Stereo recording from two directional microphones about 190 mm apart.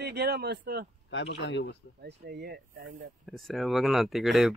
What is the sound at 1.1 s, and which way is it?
Speech, 75° left (ahead or behind).